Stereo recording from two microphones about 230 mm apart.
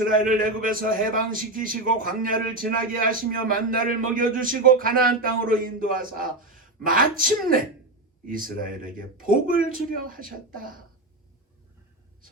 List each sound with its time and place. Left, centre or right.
0.0 s a man's voice: right